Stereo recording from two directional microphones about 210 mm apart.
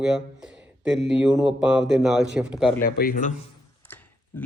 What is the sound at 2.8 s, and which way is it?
Speech, 45° left (ahead or behind).